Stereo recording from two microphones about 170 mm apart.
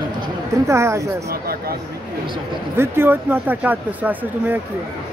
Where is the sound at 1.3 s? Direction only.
60° right (ahead or behind).